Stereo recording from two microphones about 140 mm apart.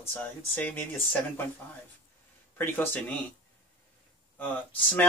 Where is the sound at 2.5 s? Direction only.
15° left (ahead or behind).